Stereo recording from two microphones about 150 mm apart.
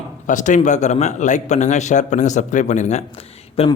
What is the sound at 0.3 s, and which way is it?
A man's voice, 55° left (ahead or behind).